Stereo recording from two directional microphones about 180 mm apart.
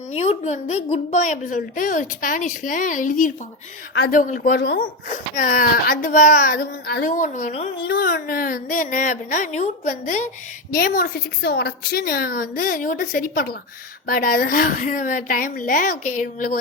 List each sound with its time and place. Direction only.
0.1 s a woman's voice: 35° left (ahead or behind)
4.6 s speech: 65° left (ahead or behind)
5.0 s a woman's voice: 45° left (ahead or behind)
7.1 s a woman's voice: 45° left (ahead or behind)
7.9 s a woman's voice: 60° left (ahead or behind)